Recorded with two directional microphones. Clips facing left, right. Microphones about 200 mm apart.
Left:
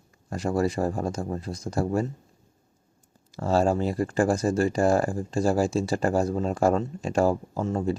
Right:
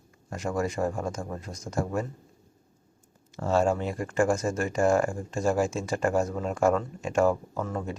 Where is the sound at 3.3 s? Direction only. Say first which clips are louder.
Left 2 dB; 35° left (ahead or behind).